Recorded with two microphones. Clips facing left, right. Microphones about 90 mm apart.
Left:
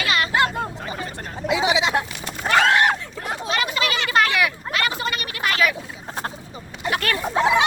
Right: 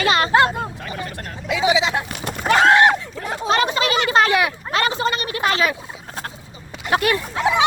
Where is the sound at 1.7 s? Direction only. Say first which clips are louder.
Right 4 dB; 10° left (ahead or behind).